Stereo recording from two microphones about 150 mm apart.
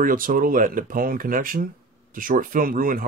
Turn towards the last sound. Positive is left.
turn(degrees=-70)  # may be behind; listen again after turning